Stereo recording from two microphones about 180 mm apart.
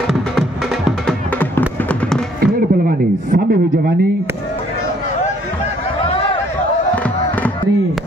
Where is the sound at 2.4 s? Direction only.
60° right (ahead or behind).